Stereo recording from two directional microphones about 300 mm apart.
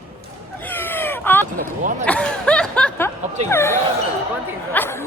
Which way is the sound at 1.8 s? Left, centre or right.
Right.